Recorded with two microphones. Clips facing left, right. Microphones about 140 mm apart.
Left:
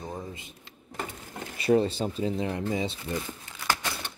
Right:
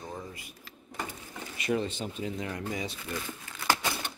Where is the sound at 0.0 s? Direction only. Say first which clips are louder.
Left 3 dB; 20° left (ahead or behind).